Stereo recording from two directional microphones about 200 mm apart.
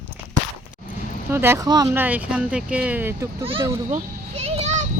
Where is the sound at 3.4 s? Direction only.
25° right (ahead or behind).